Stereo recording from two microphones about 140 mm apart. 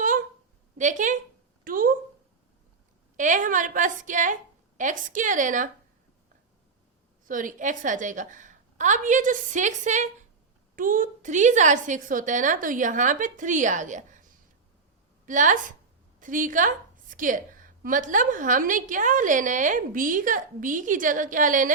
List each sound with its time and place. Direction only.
0.8 s a woman's voice: 65° right (ahead or behind)
1.6 s speech: 85° right
3.2 s a woman's voice: 65° right (ahead or behind)
7.3 s a woman's voice: 70° right (ahead or behind)
10.8 s a woman's voice: 70° right (ahead or behind)
15.3 s a woman's voice: 65° right (ahead or behind)